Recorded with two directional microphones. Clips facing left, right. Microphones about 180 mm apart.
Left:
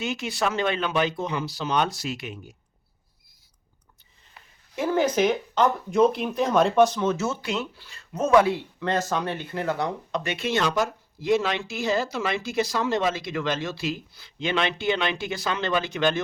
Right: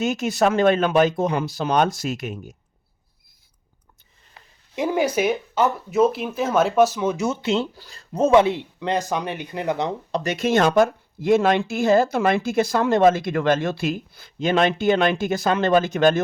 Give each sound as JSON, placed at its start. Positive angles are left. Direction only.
{"t": 0.0, "sound": "speech", "side_deg": -45}
{"t": 4.7, "sound": "speech", "side_deg": -15}
{"t": 7.8, "sound": "speech", "side_deg": -40}
{"t": 10.1, "sound": "speech", "side_deg": -35}